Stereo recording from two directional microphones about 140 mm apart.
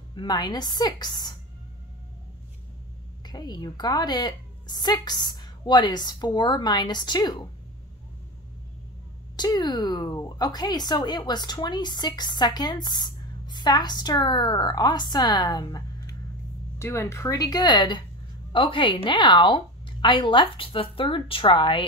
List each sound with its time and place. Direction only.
0.1 s speech: 30° left (ahead or behind)
3.3 s speech: 30° left (ahead or behind)
9.4 s speech: 30° left (ahead or behind)